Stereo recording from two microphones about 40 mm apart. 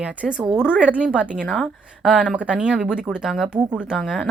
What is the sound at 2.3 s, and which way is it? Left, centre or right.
Speech, right.